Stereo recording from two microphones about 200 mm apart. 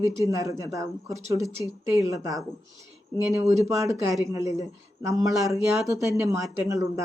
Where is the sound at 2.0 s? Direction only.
15° right (ahead or behind).